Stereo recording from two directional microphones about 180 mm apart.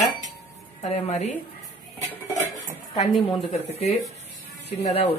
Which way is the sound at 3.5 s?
35° left (ahead or behind).